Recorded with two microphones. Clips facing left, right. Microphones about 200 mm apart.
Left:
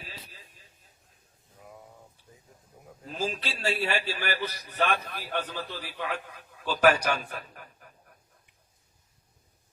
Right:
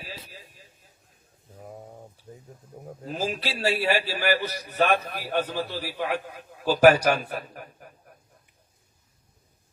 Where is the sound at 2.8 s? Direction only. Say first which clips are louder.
Right 3 dB; 40° right (ahead or behind).